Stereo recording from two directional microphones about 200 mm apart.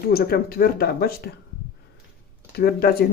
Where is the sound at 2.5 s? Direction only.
50° left (ahead or behind).